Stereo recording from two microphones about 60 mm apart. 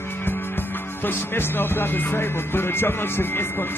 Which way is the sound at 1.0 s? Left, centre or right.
Left.